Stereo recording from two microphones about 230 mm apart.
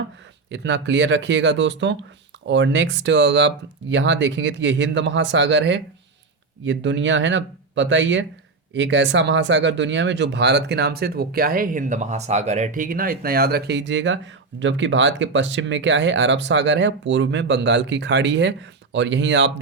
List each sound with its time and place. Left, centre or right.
0.5 s speech: right